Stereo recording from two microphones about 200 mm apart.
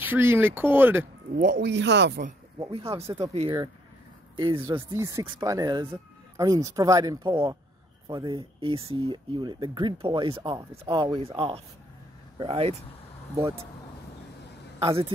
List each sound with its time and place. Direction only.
0.0 s speech: 10° right (ahead or behind)
1.3 s speech: 40° right (ahead or behind)
1.6 s speech: 60° right (ahead or behind)
2.6 s speech: 30° right (ahead or behind)
4.4 s speech: 20° right (ahead or behind)
14.8 s speech: 25° right (ahead or behind)